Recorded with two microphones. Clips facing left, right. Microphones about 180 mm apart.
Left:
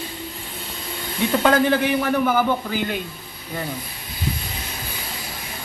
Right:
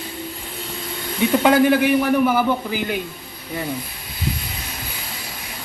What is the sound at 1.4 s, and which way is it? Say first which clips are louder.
Speech: right 3 dB; 10° right (ahead or behind).